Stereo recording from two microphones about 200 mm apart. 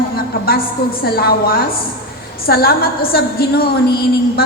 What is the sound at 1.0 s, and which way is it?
A woman's voice, 50° left (ahead or behind).